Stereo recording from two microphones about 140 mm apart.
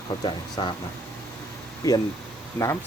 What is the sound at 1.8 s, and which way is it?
Speech, 25° left (ahead or behind).